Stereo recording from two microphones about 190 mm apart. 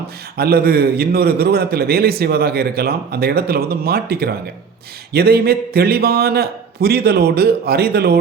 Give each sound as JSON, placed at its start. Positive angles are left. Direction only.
{"t": 0.3, "sound": "a man's voice", "side_deg": -55}